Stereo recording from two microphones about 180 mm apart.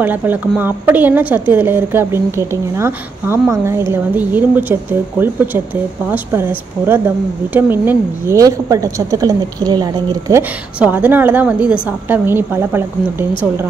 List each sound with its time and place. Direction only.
0.0 s a woman's voice: 10° right (ahead or behind)
6.0 s a woman's voice: 10° right (ahead or behind)
10.8 s a woman's voice: 10° right (ahead or behind)